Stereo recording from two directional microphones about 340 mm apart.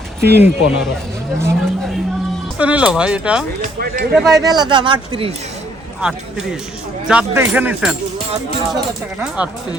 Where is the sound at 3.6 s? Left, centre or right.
Right.